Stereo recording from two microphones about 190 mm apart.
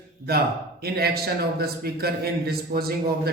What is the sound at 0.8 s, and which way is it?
A man's voice, 55° right (ahead or behind).